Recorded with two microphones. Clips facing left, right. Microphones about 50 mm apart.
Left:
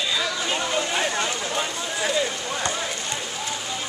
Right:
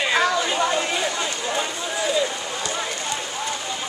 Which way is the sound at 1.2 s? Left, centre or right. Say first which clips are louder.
Right 1 dB; centre.